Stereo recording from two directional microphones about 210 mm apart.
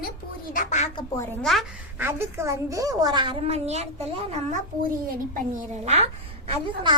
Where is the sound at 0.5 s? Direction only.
35° left (ahead or behind).